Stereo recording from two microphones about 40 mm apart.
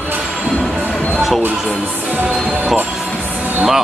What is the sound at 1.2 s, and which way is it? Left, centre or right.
Speech, centre.